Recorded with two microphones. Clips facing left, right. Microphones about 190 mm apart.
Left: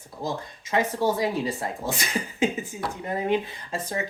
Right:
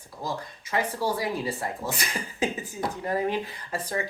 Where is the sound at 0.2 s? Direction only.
25° left (ahead or behind).